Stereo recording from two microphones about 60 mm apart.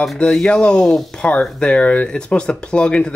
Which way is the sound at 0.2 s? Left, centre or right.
Centre.